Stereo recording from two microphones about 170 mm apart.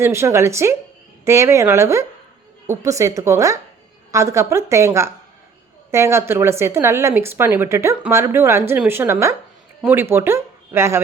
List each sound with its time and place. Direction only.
0.0 s speech: 15° right (ahead or behind)